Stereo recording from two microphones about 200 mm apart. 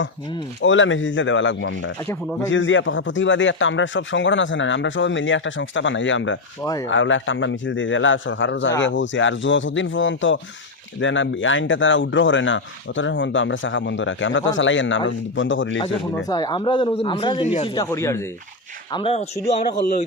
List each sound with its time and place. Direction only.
0.6 s speech: 70° left (ahead or behind)
15.8 s speech: 20° left (ahead or behind)
17.7 s speech: 15° left (ahead or behind)
18.9 s speech: 25° left (ahead or behind)